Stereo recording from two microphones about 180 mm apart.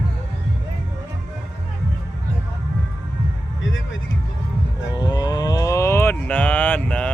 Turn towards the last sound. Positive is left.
turn(degrees=10)  # may be behind; listen again after turning